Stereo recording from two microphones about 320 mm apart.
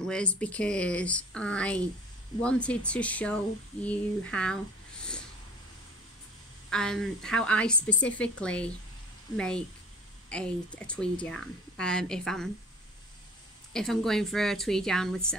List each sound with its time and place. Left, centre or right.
0.0 s speech: centre
6.7 s speech: centre
13.7 s speech: centre